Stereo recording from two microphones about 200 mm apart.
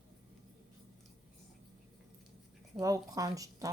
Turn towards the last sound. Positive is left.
turn(degrees=-15)  # may be behind; listen again after turning